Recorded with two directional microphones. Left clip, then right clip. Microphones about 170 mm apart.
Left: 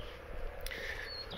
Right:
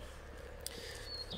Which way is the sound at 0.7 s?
20° right (ahead or behind).